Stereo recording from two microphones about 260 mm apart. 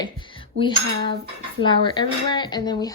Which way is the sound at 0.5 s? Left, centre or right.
Centre.